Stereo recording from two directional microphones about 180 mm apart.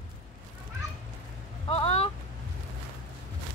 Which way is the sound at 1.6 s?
30° left (ahead or behind).